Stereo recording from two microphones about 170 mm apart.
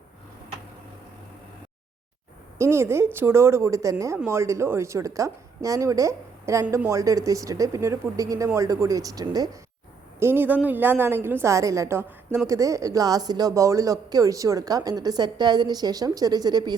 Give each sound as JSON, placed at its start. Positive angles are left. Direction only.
{"t": 2.6, "sound": "a woman's voice", "side_deg": -15}